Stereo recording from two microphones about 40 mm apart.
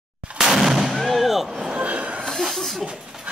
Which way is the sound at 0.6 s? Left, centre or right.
Centre.